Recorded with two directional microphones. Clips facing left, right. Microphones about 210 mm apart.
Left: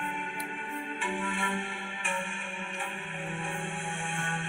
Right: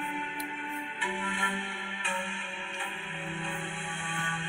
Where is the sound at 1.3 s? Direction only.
45° left (ahead or behind).